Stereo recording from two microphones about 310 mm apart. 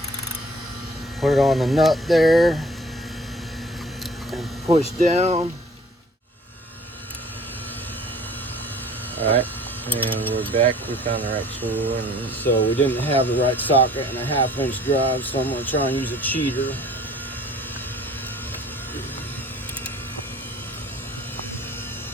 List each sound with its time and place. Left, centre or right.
1.2 s speech: centre
5.0 s speech: right
9.2 s speech: centre